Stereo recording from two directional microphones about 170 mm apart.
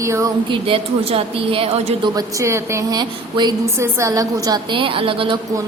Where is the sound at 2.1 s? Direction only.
15° right (ahead or behind).